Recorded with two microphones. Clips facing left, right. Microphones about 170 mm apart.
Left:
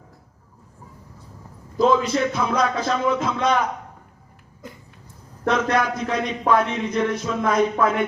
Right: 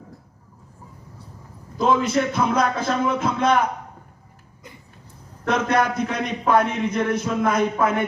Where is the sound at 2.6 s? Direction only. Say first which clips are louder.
Even; 55° right (ahead or behind).